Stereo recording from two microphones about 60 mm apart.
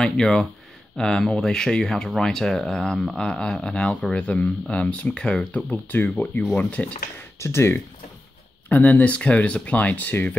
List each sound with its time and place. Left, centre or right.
0.0 s speech: centre
5.7 s speech: left
6.0 s speech: left
7.3 s speech: left
8.6 s speech: left